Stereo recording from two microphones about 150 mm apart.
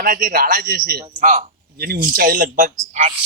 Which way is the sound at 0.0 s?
65° right (ahead or behind).